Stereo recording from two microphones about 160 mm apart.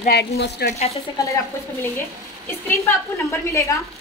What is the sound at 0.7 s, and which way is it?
Speech, 40° left (ahead or behind).